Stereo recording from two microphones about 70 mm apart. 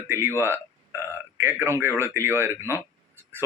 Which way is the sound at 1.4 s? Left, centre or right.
Right.